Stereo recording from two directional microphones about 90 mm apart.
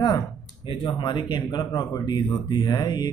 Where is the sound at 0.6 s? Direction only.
65° left (ahead or behind).